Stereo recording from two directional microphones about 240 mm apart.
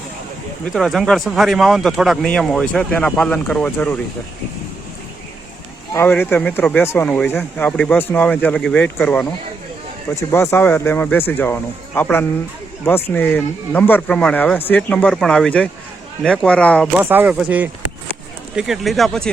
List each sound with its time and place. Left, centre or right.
0.6 s speech: centre
5.9 s speech: centre
17.0 s speech: centre